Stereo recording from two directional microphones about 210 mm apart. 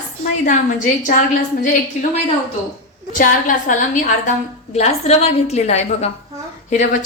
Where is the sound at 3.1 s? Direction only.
40° left (ahead or behind).